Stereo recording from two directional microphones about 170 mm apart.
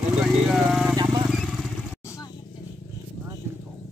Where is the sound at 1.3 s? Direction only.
Centre (ahead or behind).